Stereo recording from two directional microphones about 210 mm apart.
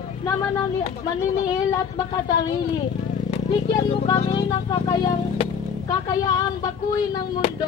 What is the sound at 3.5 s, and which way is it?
Speech, 20° left (ahead or behind).